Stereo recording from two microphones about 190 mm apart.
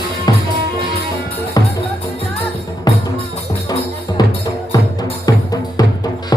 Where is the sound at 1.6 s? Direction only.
20° left (ahead or behind).